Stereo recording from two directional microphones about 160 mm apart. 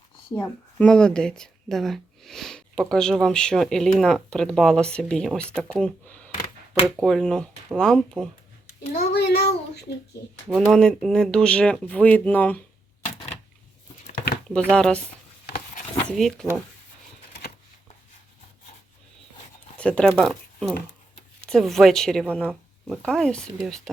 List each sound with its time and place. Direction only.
0.3 s speech: 15° left (ahead or behind)
0.9 s speech: 5° left (ahead or behind)
8.9 s a sound: 85° left
10.6 s speech: 5° left (ahead or behind)
14.7 s speech: 5° left (ahead or behind)
16.0 s speech: centre (ahead or behind)
19.7 s speech: 5° left (ahead or behind)